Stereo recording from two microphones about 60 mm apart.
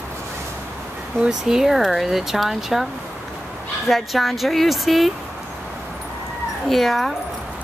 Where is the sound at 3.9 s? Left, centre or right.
Centre.